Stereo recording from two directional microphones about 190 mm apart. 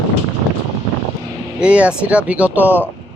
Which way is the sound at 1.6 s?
5° right (ahead or behind).